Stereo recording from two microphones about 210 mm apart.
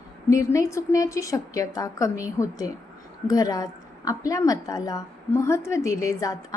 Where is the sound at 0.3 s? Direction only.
15° left (ahead or behind).